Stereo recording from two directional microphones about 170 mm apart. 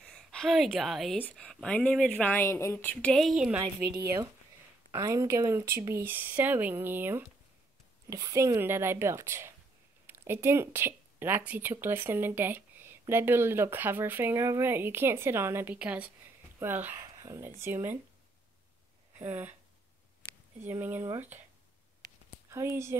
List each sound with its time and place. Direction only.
0.0 s a woman's voice: 5° left (ahead or behind)
3.6 s speech: 20° right (ahead or behind)
19.1 s speech: 10° right (ahead or behind)
20.6 s speech: 10° right (ahead or behind)
22.5 s speech: 15° right (ahead or behind)